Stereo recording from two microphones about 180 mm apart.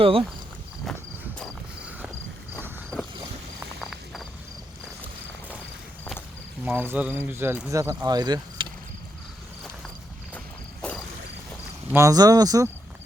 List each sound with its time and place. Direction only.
0.0 s speech: 30° right (ahead or behind)
0.9 s cricket: centre (ahead or behind)
2.6 s a sound: 10° right (ahead or behind)
3.8 s cricket: centre (ahead or behind)
6.7 s speech: 10° right (ahead or behind)
10.3 s walk: 5° left (ahead or behind)
11.9 s speech: 15° right (ahead or behind)